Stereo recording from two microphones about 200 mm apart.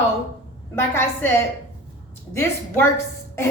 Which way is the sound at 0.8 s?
10° left (ahead or behind).